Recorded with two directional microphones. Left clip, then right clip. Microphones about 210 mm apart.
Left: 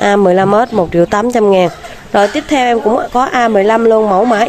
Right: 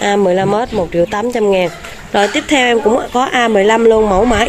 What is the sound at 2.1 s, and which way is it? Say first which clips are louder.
Speech: left 1 dB; 5° left (ahead or behind).